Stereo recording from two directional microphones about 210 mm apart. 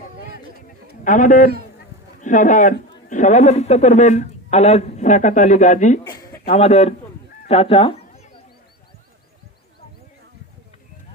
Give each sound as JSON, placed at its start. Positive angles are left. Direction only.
{"t": 1.0, "sound": "a man's voice", "side_deg": 35}